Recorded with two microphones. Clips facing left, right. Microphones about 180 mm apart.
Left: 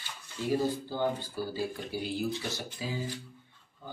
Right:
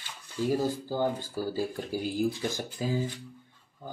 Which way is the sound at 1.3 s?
45° right (ahead or behind).